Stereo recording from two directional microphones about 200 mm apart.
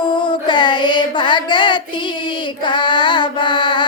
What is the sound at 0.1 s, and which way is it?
Music, 25° left (ahead or behind).